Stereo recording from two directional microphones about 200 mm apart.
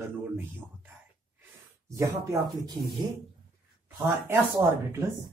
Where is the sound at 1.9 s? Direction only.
15° right (ahead or behind).